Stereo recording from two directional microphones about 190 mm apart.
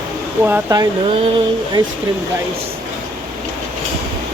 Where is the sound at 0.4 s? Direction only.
15° right (ahead or behind).